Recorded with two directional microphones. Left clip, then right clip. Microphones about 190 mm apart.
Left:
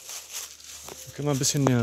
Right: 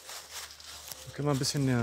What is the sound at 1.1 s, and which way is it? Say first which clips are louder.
Speech: left 3 dB; 25° left (ahead or behind).